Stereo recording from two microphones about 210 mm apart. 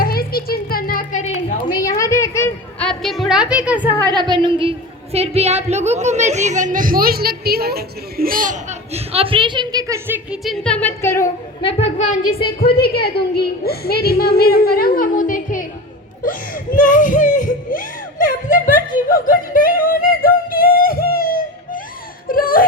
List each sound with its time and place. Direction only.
0.0 s a sound: 45° left (ahead or behind)
1.8 s a sound: 15° left (ahead or behind); by 3.8 s 5° right (ahead or behind)
4.0 s a woman's voice: 20° right (ahead or behind); by 11.3 s 10° left (ahead or behind)
11.6 s a child's voice: 30° left (ahead or behind)
12.3 s a woman's voice: 45° left (ahead or behind)
16.2 s music: 40° left (ahead or behind)